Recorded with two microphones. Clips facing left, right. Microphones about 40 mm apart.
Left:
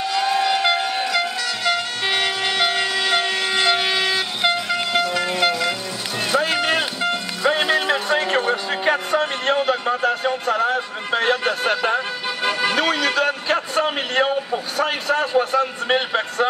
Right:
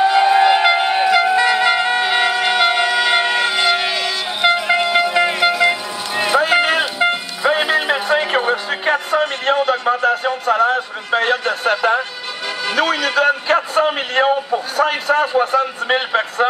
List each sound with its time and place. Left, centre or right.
0.0 s music: right
3.9 s vehicle: centre
4.4 s vehicle: centre
4.6 s music: right
5.6 s vehicle: right
6.4 s music: centre
12.7 s a man's voice: centre